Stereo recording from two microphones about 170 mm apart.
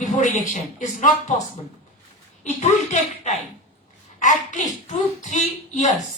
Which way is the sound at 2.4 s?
40° left (ahead or behind).